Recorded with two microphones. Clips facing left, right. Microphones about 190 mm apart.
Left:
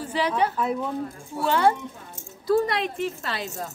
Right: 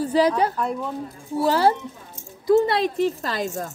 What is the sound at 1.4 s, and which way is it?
A woman's voice, 35° right (ahead or behind).